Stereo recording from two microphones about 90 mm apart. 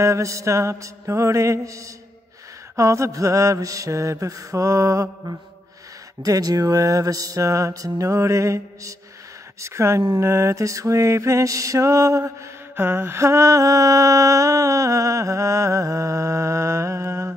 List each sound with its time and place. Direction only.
0.0 s mantra: 35° right (ahead or behind)